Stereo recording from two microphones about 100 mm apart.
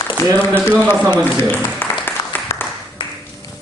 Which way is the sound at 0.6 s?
20° left (ahead or behind).